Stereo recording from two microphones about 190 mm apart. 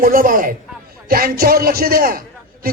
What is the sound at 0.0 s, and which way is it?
A man's voice, 45° right (ahead or behind).